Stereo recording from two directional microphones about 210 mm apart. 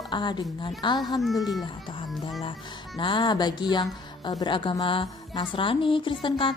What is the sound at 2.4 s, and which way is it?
Speech, 20° left (ahead or behind).